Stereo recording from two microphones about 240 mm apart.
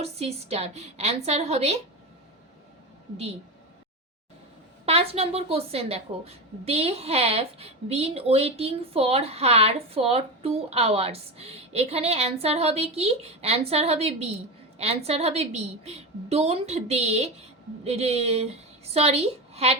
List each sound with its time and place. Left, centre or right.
0.0 s a woman's voice: right
4.9 s a woman's voice: right